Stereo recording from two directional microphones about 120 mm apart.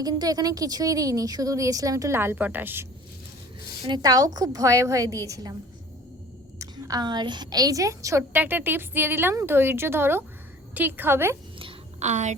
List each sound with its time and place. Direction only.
0.0 s a woman's voice: 35° right (ahead or behind); by 2.8 s 15° right (ahead or behind)
3.8 s a woman's voice: 35° right (ahead or behind)
6.6 s a woman's voice: 30° right (ahead or behind)
11.9 s a woman's voice: 75° right (ahead or behind)